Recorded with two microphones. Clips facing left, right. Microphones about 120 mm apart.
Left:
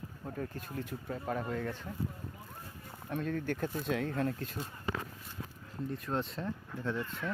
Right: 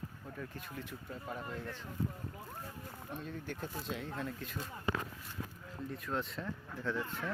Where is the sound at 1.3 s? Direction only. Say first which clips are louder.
Left 7 dB; 55° left (ahead or behind).